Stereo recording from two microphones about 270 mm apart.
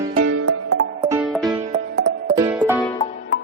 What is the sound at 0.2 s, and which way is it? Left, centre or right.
Music, right.